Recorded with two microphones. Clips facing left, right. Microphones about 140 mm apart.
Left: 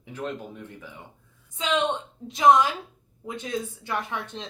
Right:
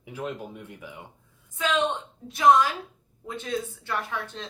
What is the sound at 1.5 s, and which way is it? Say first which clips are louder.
A woman's voice: even; 20° left (ahead or behind).